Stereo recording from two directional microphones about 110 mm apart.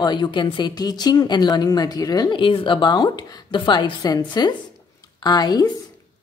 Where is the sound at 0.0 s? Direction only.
45° left (ahead or behind).